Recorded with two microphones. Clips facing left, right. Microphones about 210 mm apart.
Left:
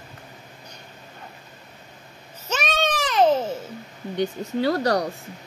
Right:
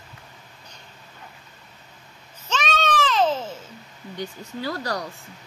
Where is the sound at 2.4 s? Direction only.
10° left (ahead or behind).